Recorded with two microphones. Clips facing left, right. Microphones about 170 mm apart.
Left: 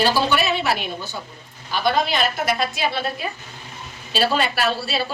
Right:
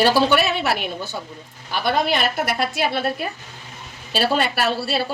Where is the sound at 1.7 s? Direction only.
65° right (ahead or behind).